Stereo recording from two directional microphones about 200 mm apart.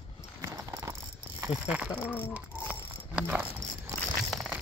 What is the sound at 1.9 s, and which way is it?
Speech, 10° left (ahead or behind).